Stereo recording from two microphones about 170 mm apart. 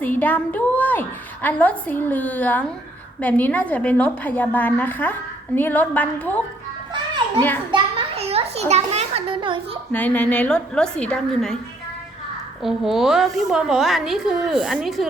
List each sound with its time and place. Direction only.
0.0 s a woman's voice: 10° left (ahead or behind)
7.7 s children playing: 35° right (ahead or behind)
9.9 s a woman's voice: 10° left (ahead or behind)
12.6 s a woman's voice: centre (ahead or behind)